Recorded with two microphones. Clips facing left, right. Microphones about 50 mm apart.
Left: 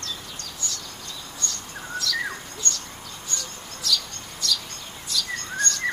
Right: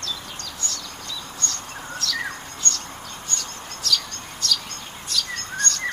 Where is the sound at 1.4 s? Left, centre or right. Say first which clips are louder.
Left 1 dB; right.